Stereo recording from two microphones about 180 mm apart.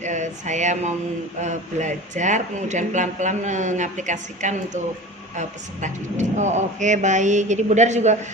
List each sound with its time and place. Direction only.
0.0 s speech: 40° right (ahead or behind)